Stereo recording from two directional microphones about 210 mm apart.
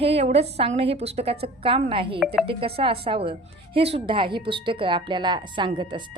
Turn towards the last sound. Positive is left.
turn(degrees=-20)  # may be behind; listen again after turning